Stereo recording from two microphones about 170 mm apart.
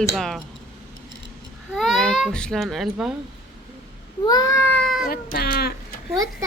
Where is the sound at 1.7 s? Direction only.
Centre (ahead or behind).